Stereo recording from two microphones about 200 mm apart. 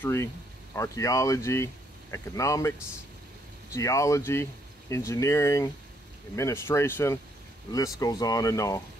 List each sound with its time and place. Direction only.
0.0 s speech: 15° left (ahead or behind)
3.7 s speech: 15° left (ahead or behind)